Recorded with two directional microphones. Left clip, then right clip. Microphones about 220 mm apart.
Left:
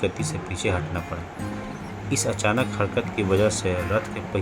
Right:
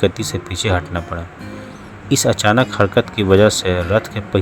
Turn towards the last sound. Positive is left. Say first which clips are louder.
# right 8 dB
turn(degrees=-30)  # may be behind; listen again after turning